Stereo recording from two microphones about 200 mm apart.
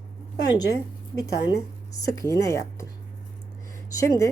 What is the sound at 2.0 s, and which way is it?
Speech, 15° left (ahead or behind).